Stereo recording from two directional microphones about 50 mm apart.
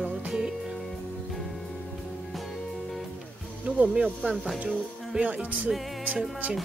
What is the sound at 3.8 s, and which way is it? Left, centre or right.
Speech, right.